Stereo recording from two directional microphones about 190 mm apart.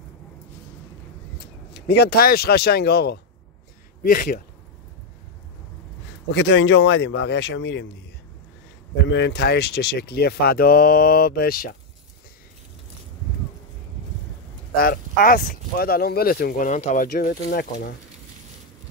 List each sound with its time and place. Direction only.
1.7 s speech: 60° left (ahead or behind)
6.3 s speech: 70° left (ahead or behind)
9.1 s speech: 65° left (ahead or behind)
14.8 s speech: 50° left (ahead or behind)